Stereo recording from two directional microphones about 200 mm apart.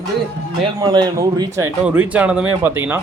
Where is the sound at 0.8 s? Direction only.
20° right (ahead or behind).